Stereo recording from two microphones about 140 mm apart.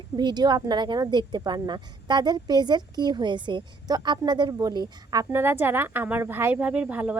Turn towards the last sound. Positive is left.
turn(degrees=-10)  # may be behind; listen again after turning